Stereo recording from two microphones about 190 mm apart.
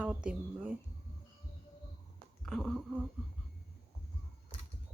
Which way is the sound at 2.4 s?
Centre (ahead or behind).